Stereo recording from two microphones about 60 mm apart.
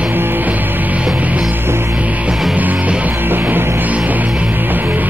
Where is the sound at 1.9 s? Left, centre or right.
Right.